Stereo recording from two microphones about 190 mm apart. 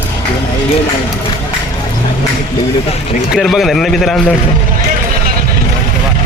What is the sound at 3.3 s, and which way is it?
A man's voice, centre (ahead or behind).